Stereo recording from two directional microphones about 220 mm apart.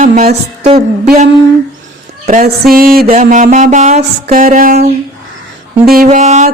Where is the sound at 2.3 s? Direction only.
35° right (ahead or behind).